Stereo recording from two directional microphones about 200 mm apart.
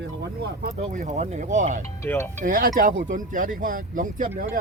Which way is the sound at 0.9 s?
40° right (ahead or behind).